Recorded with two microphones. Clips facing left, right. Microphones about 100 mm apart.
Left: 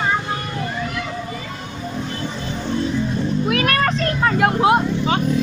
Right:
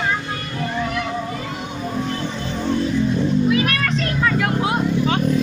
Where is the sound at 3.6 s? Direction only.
40° left (ahead or behind).